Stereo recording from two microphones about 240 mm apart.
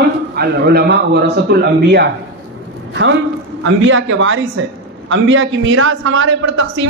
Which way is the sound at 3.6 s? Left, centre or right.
Right.